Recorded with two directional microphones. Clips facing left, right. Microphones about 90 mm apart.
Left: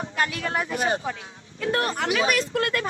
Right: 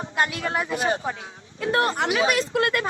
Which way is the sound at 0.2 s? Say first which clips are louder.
Right 2 dB; 30° right (ahead or behind).